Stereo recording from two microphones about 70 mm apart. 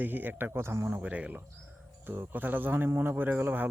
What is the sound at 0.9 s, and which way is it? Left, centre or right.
Speech, right.